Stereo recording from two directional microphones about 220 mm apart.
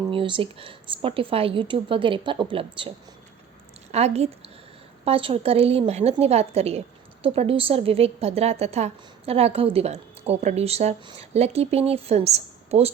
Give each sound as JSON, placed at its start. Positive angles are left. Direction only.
{"t": 0.1, "sound": "a woman's voice", "side_deg": -25}
{"t": 3.9, "sound": "a woman's voice", "side_deg": -30}